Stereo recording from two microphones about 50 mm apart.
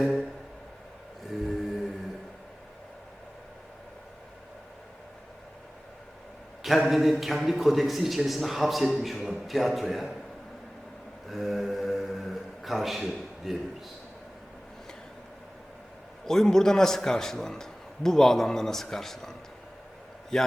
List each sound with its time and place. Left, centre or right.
1.3 s mantra: centre
6.6 s a man's voice: centre
11.3 s mantra: centre
16.2 s a man's voice: centre